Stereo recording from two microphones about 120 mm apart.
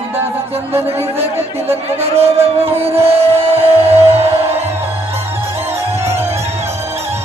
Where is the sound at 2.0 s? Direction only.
55° right (ahead or behind).